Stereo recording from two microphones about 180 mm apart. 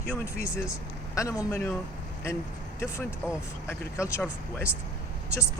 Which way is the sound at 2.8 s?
15° left (ahead or behind).